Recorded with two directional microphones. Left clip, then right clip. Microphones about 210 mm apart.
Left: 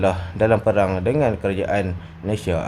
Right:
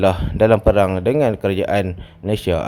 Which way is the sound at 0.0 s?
40° right (ahead or behind).